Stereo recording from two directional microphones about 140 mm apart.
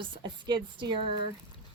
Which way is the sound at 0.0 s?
30° right (ahead or behind).